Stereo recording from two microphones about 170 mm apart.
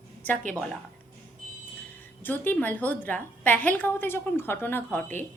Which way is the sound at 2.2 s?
10° left (ahead or behind).